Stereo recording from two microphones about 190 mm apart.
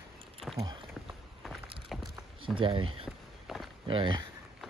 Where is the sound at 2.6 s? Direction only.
25° right (ahead or behind).